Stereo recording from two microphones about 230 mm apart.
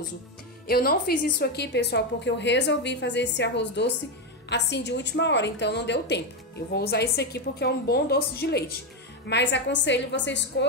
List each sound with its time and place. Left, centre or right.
0.7 s a woman's voice: left